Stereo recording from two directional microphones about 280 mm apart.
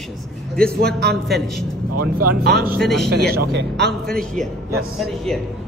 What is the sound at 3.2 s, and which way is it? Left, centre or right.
Speech, right.